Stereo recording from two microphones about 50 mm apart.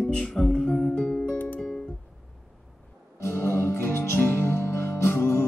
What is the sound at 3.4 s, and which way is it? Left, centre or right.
Music, left.